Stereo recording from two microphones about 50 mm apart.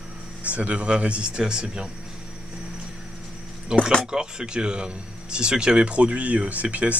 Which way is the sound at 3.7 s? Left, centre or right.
Centre.